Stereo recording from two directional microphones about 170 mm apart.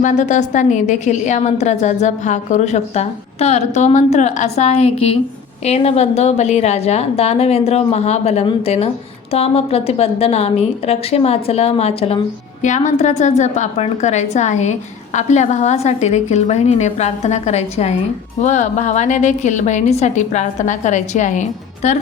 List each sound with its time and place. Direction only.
0.0 s a woman's voice: 45° left (ahead or behind)